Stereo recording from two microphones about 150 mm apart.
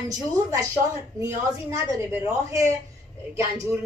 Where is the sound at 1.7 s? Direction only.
20° right (ahead or behind).